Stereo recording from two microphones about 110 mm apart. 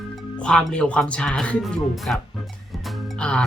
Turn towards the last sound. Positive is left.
turn(degrees=10)  # may be behind; listen again after turning